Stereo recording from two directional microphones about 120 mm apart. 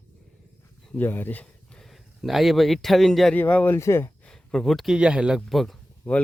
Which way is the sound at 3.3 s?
15° left (ahead or behind).